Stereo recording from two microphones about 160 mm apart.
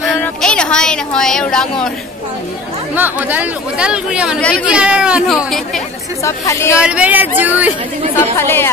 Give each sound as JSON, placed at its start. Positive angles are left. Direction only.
{"t": 0.2, "sound": "speech", "side_deg": 5}
{"t": 2.9, "sound": "speech", "side_deg": -10}
{"t": 4.4, "sound": "speech", "side_deg": 5}
{"t": 4.6, "sound": "a woman's voice", "side_deg": -5}
{"t": 6.2, "sound": "speech", "side_deg": 20}
{"t": 6.8, "sound": "speech", "side_deg": -10}
{"t": 8.2, "sound": "speech", "side_deg": 15}